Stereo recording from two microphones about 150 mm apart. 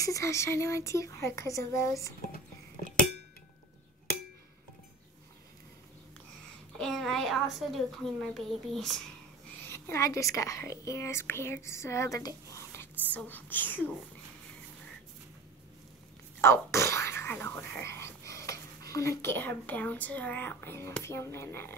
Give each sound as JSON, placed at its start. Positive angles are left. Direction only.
{"t": 0.0, "sound": "speech", "side_deg": 20}
{"t": 2.3, "sound": "music", "side_deg": 65}
{"t": 6.8, "sound": "a woman's voice", "side_deg": 5}
{"t": 9.6, "sound": "a woman's voice", "side_deg": 15}
{"t": 16.3, "sound": "a woman's voice", "side_deg": 15}